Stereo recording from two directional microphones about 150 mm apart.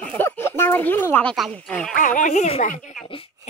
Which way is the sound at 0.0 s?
10° left (ahead or behind).